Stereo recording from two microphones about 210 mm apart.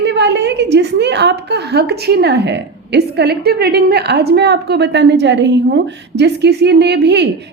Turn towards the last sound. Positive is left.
turn(degrees=-55)  # may be behind; listen again after turning